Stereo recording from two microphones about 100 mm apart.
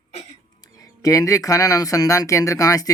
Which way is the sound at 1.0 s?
35° left (ahead or behind).